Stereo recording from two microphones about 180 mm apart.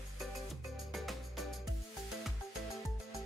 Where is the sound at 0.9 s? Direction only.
Centre (ahead or behind).